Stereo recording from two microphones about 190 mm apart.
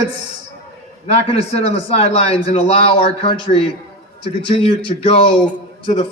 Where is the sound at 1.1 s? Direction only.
30° left (ahead or behind).